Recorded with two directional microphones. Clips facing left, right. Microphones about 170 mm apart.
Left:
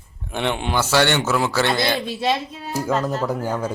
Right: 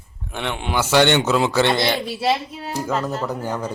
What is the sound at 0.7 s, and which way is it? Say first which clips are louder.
Speech: right 4 dB; 15° right (ahead or behind).